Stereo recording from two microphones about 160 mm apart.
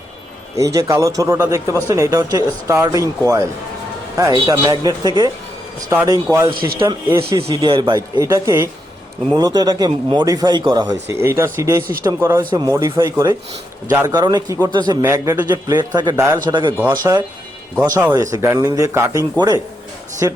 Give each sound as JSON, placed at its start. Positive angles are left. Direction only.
{"t": 0.5, "sound": "speech", "side_deg": -20}
{"t": 7.3, "sound": "speech", "side_deg": -35}
{"t": 11.1, "sound": "speech", "side_deg": -15}